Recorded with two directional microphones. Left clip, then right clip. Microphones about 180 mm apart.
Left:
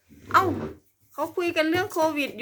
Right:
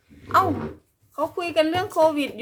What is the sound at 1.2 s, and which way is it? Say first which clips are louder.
Speech: right 3 dB; 10° left (ahead or behind).